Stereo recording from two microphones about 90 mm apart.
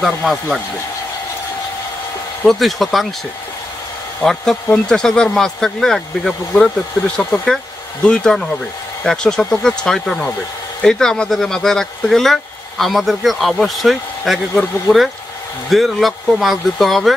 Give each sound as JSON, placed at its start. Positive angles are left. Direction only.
{"t": 0.0, "sound": "speech", "side_deg": 0}
{"t": 2.4, "sound": "speech", "side_deg": 0}
{"t": 4.2, "sound": "speech", "side_deg": 5}
{"t": 7.2, "sound": "speech", "side_deg": 20}
{"t": 7.4, "sound": "speech", "side_deg": 10}